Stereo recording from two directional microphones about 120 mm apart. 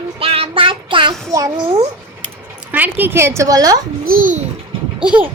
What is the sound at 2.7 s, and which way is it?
A woman's voice, 15° right (ahead or behind).